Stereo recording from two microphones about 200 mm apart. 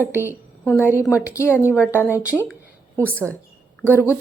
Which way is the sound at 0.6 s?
10° left (ahead or behind).